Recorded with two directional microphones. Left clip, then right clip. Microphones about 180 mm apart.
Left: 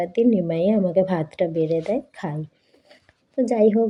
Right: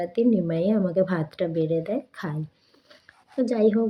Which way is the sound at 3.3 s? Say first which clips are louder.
Left 4 dB; 15° left (ahead or behind).